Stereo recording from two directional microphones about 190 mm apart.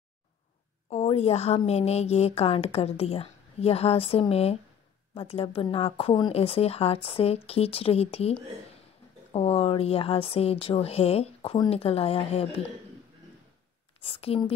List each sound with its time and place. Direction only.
0.8 s speech: 35° left (ahead or behind)
14.0 s a woman's voice: 30° left (ahead or behind)